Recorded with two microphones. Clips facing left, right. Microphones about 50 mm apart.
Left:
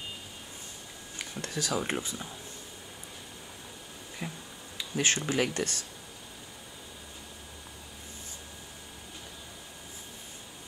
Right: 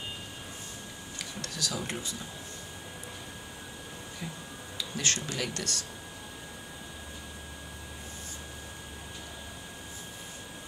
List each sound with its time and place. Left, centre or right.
1.1 s speech: left
4.2 s tick-tock: left
4.7 s speech: left